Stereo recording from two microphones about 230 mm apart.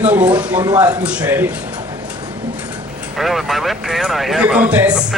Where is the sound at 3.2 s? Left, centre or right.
Centre.